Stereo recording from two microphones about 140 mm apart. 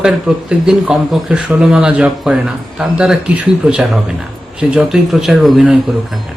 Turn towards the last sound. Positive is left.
turn(degrees=-5)  # may be behind; listen again after turning